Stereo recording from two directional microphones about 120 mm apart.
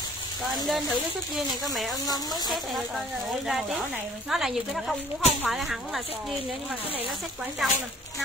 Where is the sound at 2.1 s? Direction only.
35° left (ahead or behind).